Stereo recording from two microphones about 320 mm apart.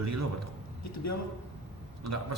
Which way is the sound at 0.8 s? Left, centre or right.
Left.